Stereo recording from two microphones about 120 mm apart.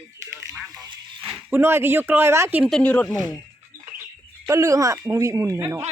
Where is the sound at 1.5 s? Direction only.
20° right (ahead or behind).